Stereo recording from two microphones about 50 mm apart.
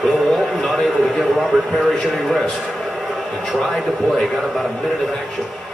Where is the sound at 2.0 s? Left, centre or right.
Centre.